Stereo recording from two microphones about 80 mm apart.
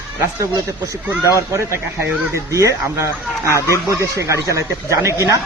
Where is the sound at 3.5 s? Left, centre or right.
Left.